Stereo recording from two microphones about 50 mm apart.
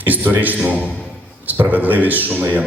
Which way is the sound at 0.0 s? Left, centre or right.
Right.